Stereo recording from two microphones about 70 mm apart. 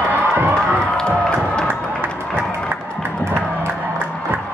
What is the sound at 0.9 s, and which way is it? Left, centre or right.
Music, centre.